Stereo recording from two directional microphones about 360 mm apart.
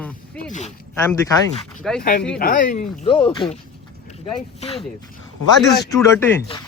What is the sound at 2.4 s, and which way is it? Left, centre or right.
Speech, left.